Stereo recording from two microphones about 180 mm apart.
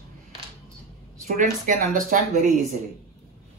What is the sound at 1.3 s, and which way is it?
Speech, 45° right (ahead or behind).